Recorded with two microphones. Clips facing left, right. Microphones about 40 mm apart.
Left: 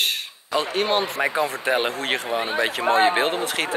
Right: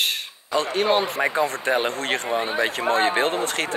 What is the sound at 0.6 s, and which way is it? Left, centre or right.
Speech, centre.